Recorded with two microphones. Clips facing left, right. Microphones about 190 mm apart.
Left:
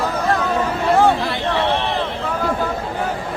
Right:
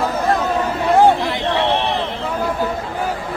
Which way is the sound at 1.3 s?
15° right (ahead or behind).